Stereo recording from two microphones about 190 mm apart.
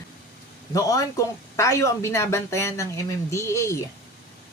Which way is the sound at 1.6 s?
15° left (ahead or behind).